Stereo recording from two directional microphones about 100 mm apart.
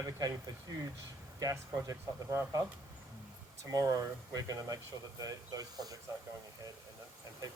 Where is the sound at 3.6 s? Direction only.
35° right (ahead or behind).